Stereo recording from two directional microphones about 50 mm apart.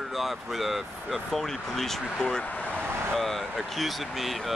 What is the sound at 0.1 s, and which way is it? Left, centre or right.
Speech, centre.